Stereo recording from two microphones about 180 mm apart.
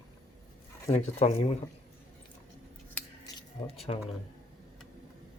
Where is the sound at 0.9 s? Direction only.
35° left (ahead or behind).